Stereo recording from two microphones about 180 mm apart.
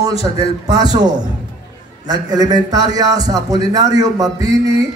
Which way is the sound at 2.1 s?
20° right (ahead or behind).